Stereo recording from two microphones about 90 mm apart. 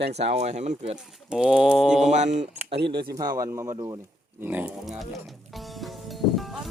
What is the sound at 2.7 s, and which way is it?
Speech, 70° right (ahead or behind).